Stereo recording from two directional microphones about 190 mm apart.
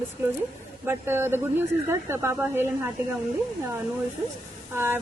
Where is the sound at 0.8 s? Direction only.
10° right (ahead or behind).